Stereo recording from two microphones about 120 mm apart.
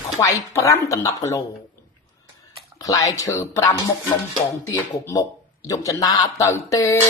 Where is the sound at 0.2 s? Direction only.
25° left (ahead or behind).